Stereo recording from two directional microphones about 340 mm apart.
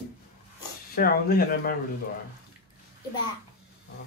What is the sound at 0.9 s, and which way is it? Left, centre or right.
Speech, left.